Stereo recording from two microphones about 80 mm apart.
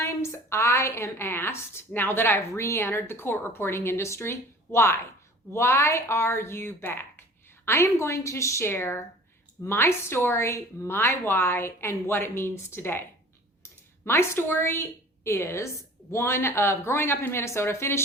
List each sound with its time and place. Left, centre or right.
0.0 s speech: left